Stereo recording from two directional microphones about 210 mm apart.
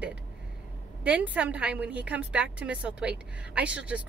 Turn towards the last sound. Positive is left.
turn(degrees=-5)  # may be behind; listen again after turning